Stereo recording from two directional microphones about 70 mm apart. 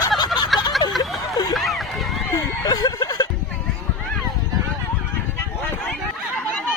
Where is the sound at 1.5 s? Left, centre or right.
Centre.